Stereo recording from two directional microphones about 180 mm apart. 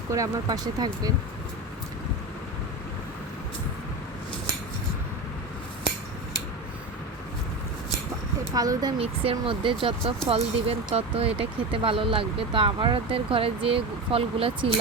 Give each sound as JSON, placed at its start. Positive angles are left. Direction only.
{"t": 0.1, "sound": "speech", "side_deg": -20}
{"t": 8.5, "sound": "speech", "side_deg": -20}